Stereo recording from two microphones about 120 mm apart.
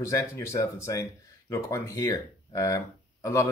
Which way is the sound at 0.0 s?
25° left (ahead or behind).